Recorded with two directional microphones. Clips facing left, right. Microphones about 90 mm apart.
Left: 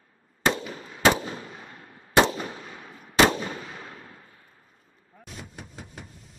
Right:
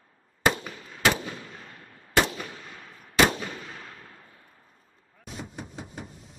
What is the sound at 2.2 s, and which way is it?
Gunshot, 35° left (ahead or behind).